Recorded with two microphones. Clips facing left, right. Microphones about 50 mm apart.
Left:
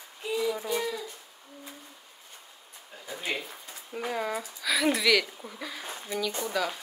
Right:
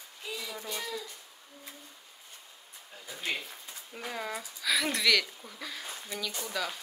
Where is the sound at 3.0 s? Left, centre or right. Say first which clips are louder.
Left 2 dB; centre.